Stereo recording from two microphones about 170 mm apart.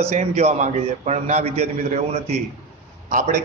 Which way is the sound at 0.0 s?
40° right (ahead or behind).